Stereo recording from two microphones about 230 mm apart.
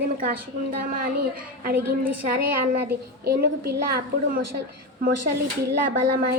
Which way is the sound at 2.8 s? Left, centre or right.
Right.